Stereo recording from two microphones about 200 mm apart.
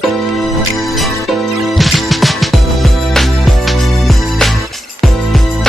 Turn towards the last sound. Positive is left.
turn(degrees=0)  # may be behind; listen again after turning